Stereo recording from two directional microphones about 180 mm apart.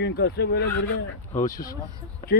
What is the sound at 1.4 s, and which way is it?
Speech, 50° left (ahead or behind).